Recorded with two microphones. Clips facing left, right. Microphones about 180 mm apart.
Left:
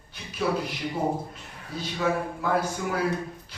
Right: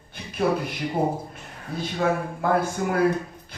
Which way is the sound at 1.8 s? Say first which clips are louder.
Right 2 dB; 50° right (ahead or behind).